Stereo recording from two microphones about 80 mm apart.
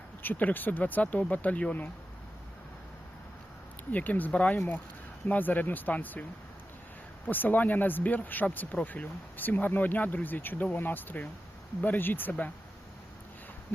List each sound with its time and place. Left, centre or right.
0.2 s speech: left
3.9 s speech: left
4.5 s speech: left
7.3 s speech: left